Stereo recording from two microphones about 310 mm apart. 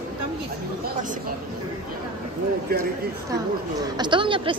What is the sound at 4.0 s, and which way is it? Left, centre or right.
Speech, centre.